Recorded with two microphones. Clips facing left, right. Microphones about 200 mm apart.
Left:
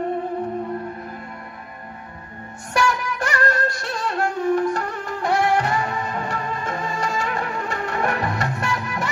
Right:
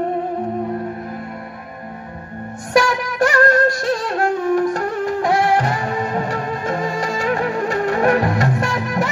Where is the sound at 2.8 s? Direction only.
40° right (ahead or behind).